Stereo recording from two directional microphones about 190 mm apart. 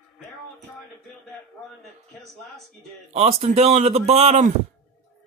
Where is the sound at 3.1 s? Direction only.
35° right (ahead or behind).